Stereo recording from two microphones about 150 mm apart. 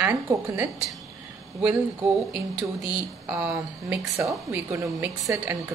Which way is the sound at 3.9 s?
20° right (ahead or behind).